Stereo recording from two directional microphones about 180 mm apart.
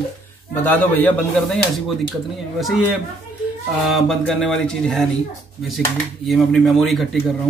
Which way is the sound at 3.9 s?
Centre (ahead or behind).